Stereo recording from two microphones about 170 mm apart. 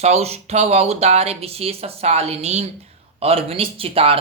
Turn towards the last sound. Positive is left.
turn(degrees=-35)  # may be behind; listen again after turning